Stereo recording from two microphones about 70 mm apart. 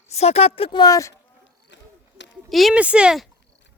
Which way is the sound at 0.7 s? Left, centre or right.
Left.